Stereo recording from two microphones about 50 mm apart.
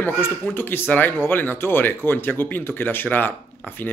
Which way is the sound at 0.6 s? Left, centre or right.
Left.